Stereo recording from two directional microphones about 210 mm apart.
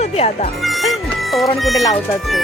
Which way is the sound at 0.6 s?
Centre (ahead or behind).